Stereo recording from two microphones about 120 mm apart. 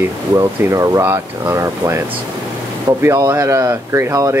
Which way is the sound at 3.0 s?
20° right (ahead or behind).